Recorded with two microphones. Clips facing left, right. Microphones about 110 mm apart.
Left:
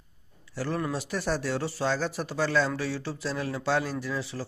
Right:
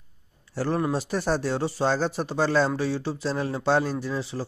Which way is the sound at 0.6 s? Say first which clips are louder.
Right 5 dB; 30° right (ahead or behind).